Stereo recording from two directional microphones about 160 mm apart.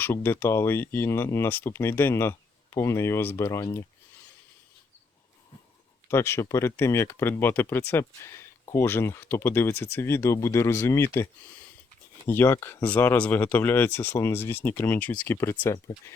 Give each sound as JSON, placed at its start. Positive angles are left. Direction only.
{"t": 0.0, "sound": "speech", "side_deg": 15}
{"t": 6.1, "sound": "speech", "side_deg": 15}
{"t": 12.3, "sound": "speech", "side_deg": 15}